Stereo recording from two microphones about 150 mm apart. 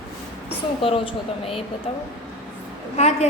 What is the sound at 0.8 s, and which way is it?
A woman's voice, 35° left (ahead or behind).